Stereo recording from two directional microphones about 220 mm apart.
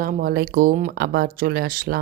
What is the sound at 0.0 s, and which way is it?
Speech, 40° right (ahead or behind).